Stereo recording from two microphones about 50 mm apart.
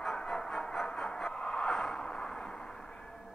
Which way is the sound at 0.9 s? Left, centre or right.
Centre.